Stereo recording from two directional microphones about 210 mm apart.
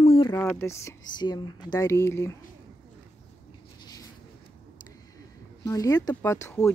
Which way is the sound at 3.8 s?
15° left (ahead or behind).